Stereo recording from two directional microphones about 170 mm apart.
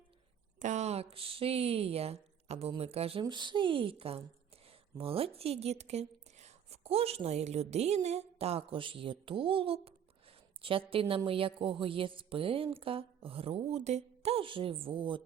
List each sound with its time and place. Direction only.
0.6 s a woman's voice: 45° right (ahead or behind)